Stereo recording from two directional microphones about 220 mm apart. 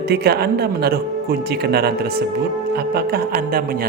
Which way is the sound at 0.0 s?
45° right (ahead or behind).